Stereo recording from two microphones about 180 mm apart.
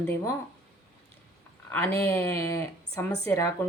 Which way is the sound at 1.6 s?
10° left (ahead or behind).